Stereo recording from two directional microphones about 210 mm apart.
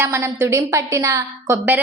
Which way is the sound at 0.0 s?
10° right (ahead or behind).